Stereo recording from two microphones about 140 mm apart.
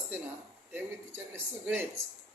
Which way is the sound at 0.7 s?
15° right (ahead or behind).